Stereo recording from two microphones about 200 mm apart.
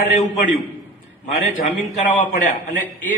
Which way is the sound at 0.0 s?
35° left (ahead or behind).